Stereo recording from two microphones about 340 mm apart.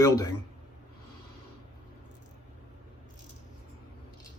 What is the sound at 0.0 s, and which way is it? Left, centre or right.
Speech, centre.